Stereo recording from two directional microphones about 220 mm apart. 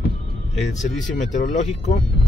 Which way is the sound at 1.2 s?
35° left (ahead or behind).